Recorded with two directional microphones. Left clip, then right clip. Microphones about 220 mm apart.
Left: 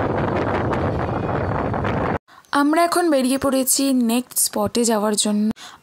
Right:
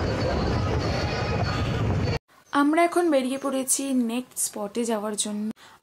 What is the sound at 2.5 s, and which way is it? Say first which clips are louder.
Speech: left 4 dB; 50° left (ahead or behind).